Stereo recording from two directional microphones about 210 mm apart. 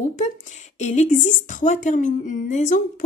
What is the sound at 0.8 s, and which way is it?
A woman's voice, 35° left (ahead or behind).